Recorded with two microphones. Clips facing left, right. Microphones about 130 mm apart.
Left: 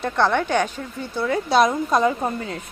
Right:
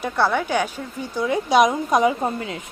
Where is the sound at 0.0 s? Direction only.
10° right (ahead or behind).